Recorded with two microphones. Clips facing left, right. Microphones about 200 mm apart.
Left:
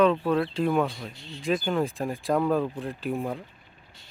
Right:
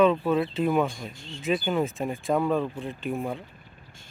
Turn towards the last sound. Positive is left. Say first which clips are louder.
# even
turn(degrees=0)  # may be behind; listen again after turning